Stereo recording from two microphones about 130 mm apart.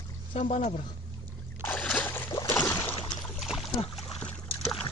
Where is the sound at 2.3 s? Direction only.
30° left (ahead or behind).